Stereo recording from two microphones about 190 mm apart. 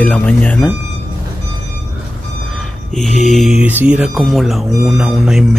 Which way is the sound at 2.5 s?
Centre (ahead or behind).